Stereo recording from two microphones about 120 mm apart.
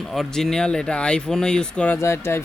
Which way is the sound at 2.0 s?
20° left (ahead or behind).